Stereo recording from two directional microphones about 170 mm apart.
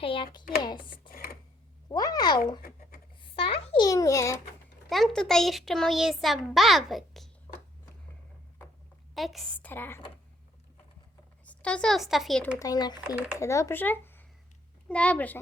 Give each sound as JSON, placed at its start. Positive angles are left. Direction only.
{"t": 0.0, "sound": "speech", "side_deg": 30}
{"t": 2.6, "sound": "writing", "side_deg": 60}
{"t": 3.2, "sound": "babbling", "side_deg": 30}
{"t": 3.8, "sound": "speech", "side_deg": 20}
{"t": 4.9, "sound": "a child's voice", "side_deg": 0}
{"t": 9.1, "sound": "a child's voice", "side_deg": 0}
{"t": 9.6, "sound": "a child's voice", "side_deg": 10}
{"t": 11.4, "sound": "speech", "side_deg": 5}
{"t": 12.5, "sound": "a child's voice", "side_deg": 20}